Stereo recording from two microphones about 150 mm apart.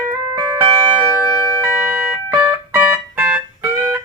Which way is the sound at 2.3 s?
10° right (ahead or behind).